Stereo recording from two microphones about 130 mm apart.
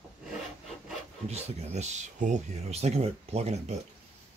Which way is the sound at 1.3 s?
60° right (ahead or behind).